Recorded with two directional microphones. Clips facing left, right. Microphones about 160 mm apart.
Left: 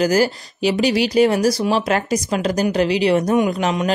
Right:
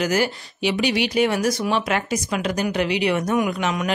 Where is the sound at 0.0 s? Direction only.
35° left (ahead or behind).